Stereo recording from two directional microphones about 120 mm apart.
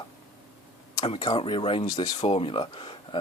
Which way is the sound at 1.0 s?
50° left (ahead or behind).